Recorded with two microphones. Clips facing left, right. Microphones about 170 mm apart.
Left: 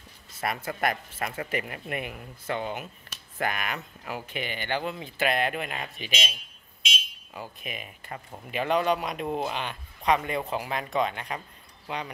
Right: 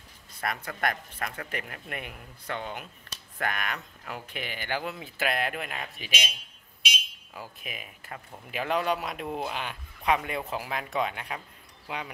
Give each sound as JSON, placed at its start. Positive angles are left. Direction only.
{"t": 0.3, "sound": "speech", "side_deg": 5}
{"t": 7.3, "sound": "speech", "side_deg": 0}